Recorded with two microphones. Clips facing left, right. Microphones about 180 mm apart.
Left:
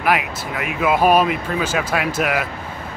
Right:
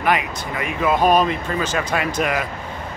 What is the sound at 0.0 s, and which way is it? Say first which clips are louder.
Speech: left 1 dB; 5° left (ahead or behind).